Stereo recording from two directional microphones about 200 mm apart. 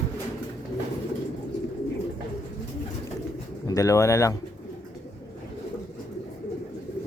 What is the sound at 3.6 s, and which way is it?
Speech, 15° left (ahead or behind).